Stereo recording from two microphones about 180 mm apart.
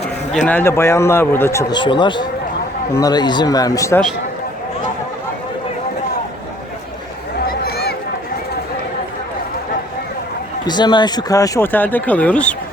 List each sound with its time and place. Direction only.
0.4 s speech: 10° left (ahead or behind)
1.8 s speech: 25° left (ahead or behind)
7.4 s a sound: 60° left (ahead or behind)
10.7 s speech: 25° left (ahead or behind); by 12.5 s 5° left (ahead or behind)